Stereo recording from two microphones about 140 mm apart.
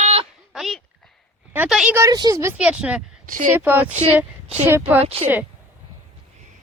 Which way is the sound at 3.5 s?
10° right (ahead or behind).